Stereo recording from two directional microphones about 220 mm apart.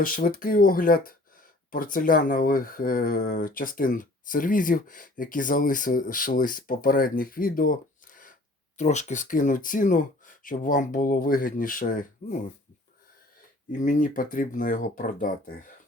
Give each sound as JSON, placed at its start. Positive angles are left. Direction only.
{"t": 0.0, "sound": "speech", "side_deg": 40}
{"t": 13.7, "sound": "speech", "side_deg": 35}